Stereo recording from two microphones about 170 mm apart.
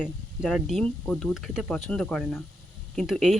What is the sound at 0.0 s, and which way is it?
Speech, centre (ahead or behind).